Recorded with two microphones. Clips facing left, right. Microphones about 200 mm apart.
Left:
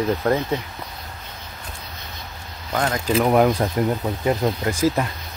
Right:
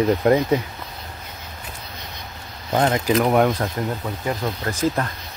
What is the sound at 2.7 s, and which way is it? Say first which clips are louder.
Speech: right 4 dB; 20° right (ahead or behind).